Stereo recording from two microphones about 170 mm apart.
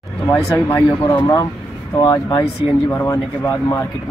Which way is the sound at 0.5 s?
10° left (ahead or behind).